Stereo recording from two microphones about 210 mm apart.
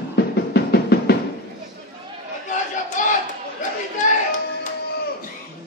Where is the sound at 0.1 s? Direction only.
50° left (ahead or behind).